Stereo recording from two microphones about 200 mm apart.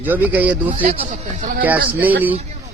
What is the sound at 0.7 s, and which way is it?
A man's voice, 40° right (ahead or behind).